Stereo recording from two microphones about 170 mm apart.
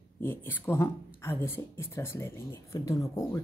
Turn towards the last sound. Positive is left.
turn(degrees=20)  # may be behind; listen again after turning